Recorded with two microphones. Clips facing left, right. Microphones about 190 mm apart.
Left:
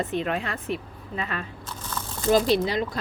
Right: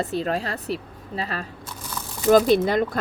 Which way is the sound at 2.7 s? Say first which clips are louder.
Right 5 dB; 50° right (ahead or behind).